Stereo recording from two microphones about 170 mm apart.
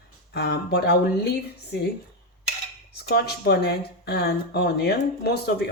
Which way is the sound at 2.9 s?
70° left (ahead or behind).